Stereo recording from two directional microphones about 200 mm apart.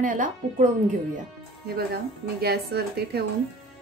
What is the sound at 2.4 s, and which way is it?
Speech, 55° right (ahead or behind).